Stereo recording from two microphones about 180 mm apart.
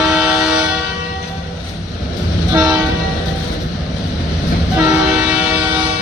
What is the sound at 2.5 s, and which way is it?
Train, 20° right (ahead or behind).